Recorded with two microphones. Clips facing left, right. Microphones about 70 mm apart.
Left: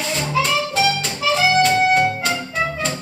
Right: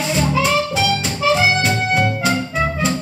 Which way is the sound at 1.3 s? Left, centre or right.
Centre.